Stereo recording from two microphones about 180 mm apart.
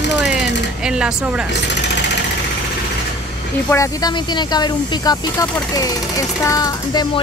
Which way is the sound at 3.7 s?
20° left (ahead or behind).